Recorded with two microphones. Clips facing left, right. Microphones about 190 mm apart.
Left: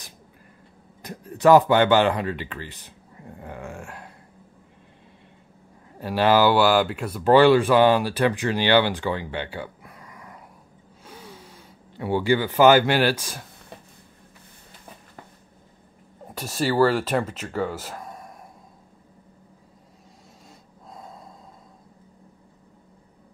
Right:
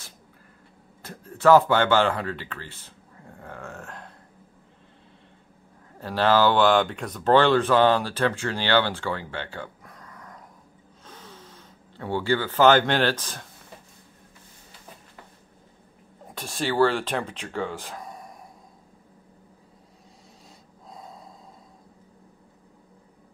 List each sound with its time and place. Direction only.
1.0 s speech: 15° left (ahead or behind)
5.9 s speech: 15° left (ahead or behind)
16.3 s speech: 5° left (ahead or behind)